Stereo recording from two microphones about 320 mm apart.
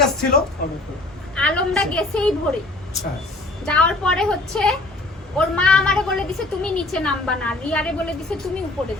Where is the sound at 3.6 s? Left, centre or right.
Centre.